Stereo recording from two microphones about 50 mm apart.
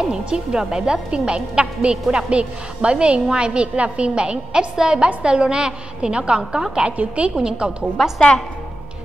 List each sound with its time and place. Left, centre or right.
0.0 s a woman's voice: centre
7.0 s a woman's voice: right
8.0 s a woman's voice: centre